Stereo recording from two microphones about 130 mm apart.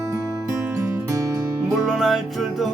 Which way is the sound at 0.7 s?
25° right (ahead or behind).